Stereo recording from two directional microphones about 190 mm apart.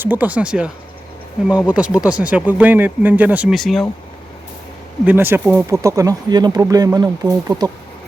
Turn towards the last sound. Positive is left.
turn(degrees=-20)  # may be behind; listen again after turning